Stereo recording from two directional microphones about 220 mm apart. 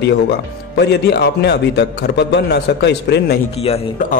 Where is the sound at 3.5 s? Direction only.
30° left (ahead or behind).